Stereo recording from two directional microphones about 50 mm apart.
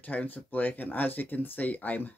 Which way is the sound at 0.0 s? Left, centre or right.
Left.